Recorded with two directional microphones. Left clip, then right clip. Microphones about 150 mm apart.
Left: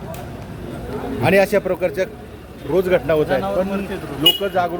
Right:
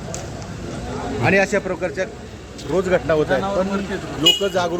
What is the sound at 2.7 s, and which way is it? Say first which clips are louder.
Speech: left 2 dB; 55° left (ahead or behind).